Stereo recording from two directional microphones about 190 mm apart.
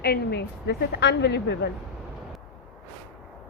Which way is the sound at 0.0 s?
60° left (ahead or behind).